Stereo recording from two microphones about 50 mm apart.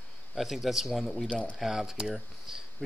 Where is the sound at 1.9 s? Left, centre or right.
Centre.